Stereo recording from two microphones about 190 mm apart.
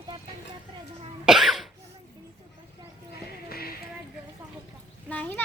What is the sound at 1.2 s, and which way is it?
Cough, centre (ahead or behind).